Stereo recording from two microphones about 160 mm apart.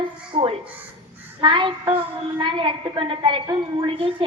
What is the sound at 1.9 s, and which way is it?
A woman's voice, 30° right (ahead or behind).